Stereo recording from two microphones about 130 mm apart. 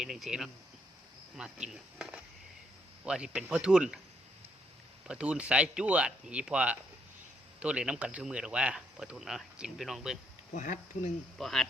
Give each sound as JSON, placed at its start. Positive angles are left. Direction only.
{"t": 0.0, "sound": "speech", "side_deg": 0}
{"t": 5.0, "sound": "speech", "side_deg": -10}
{"t": 10.5, "sound": "speech", "side_deg": 70}
{"t": 11.3, "sound": "speech", "side_deg": 0}